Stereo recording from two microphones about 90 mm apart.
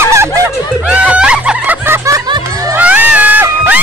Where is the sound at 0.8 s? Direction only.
15° right (ahead or behind).